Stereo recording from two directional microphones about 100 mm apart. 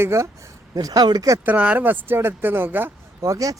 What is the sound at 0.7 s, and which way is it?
Speech, 40° right (ahead or behind).